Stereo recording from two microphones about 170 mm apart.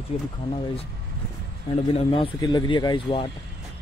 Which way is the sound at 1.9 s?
35° left (ahead or behind).